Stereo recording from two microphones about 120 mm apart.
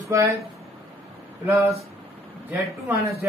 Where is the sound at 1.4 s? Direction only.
25° right (ahead or behind).